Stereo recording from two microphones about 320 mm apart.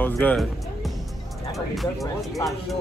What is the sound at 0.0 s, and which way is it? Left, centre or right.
Speech, centre.